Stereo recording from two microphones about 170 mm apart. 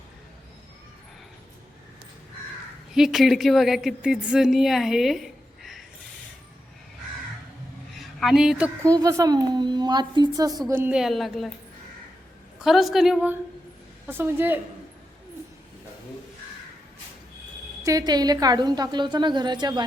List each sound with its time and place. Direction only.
2.9 s a woman's voice: centre (ahead or behind)
7.9 s a woman's voice: centre (ahead or behind)
8.9 s a woman's voice: 20° right (ahead or behind)
10.9 s a woman's voice: centre (ahead or behind)
12.5 s a woman's voice: centre (ahead or behind)
17.8 s a woman's voice: 20° right (ahead or behind)